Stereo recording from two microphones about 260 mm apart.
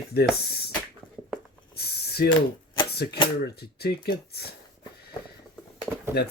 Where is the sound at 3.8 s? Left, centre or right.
Left.